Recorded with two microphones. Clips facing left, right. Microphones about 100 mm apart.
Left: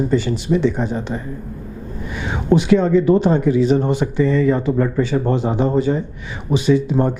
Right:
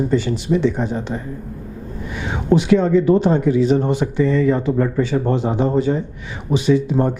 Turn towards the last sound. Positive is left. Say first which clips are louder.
# even
turn(degrees=15)  # may be behind; listen again after turning